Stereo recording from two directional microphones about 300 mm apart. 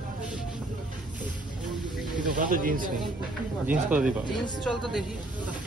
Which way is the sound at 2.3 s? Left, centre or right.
Right.